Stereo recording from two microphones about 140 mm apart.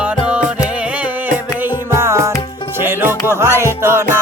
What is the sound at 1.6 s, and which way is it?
Music, 15° right (ahead or behind).